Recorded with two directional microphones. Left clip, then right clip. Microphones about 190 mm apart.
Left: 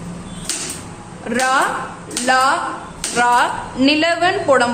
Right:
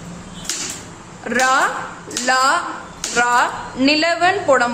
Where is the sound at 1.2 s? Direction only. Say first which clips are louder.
Right 1 dB; 10° right (ahead or behind).